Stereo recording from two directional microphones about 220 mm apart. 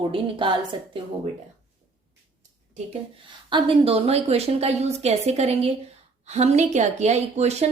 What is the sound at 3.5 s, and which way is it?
Speech, 25° right (ahead or behind).